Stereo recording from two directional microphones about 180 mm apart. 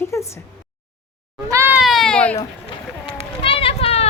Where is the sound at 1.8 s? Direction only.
Centre (ahead or behind).